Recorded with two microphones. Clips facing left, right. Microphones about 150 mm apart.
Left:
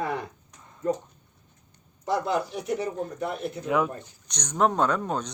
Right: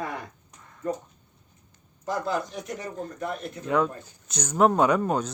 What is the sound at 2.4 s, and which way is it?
Speech, 10° left (ahead or behind).